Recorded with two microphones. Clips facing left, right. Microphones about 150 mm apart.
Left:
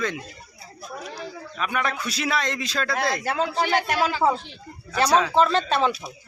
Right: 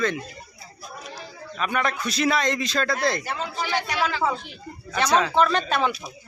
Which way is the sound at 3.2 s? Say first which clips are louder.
Left 6 dB; 90° left.